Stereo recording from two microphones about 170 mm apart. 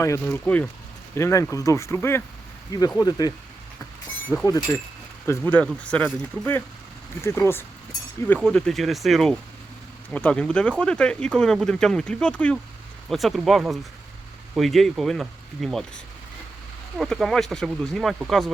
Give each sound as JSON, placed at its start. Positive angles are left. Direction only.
{"t": 0.0, "sound": "speech", "side_deg": 15}
{"t": 4.4, "sound": "speech", "side_deg": 20}
{"t": 8.4, "sound": "speech", "side_deg": 5}
{"t": 17.0, "sound": "speech", "side_deg": 0}